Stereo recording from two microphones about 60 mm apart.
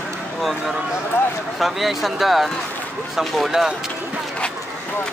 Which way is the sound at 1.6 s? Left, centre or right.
Centre.